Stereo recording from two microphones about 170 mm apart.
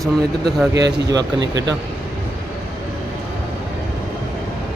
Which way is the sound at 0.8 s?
90° right.